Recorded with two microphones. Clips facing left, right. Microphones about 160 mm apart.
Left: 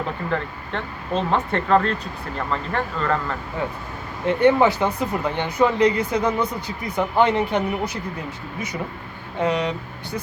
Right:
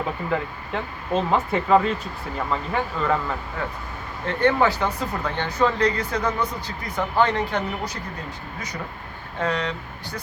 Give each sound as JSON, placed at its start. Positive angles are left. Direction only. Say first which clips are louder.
{"t": 0.3, "sound": "speech", "louder": "even", "side_deg": -5}
{"t": 4.3, "sound": "speech", "louder": "left 4 dB", "side_deg": 15}
{"t": 9.4, "sound": "speech", "louder": "left 4 dB", "side_deg": 15}